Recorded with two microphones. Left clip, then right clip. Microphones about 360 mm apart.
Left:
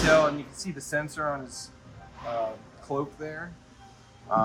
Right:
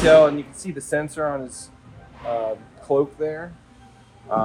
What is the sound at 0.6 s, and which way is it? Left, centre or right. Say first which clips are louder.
Speech: right 6 dB; centre.